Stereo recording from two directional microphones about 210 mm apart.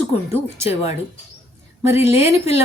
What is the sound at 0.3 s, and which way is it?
Speech, 15° right (ahead or behind).